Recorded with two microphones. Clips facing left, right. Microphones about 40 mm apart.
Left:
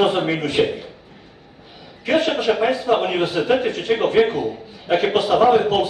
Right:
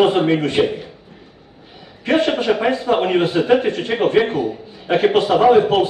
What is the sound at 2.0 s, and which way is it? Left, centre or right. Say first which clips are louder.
A man's voice: right 2 dB; right.